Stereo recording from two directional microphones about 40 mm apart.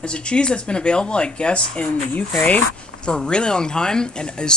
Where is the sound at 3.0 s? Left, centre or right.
Left.